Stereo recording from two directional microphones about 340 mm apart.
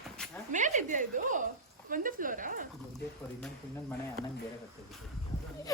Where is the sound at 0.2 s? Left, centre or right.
Centre.